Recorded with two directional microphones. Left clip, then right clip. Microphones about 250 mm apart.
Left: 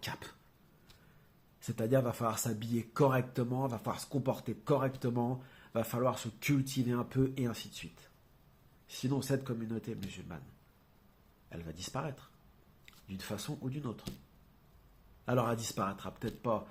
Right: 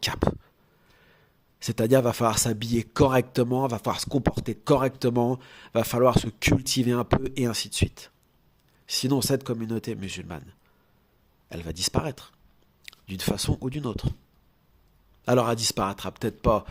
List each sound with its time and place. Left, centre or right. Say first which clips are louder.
1.5 s speech: right 10 dB; right
11.4 s speech: right 15 dB; right
15.2 s speech: right 11 dB; right